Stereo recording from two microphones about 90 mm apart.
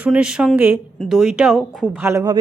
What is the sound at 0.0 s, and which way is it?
A woman's voice, 10° right (ahead or behind).